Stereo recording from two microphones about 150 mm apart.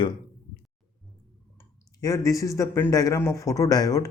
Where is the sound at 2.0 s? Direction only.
20° left (ahead or behind).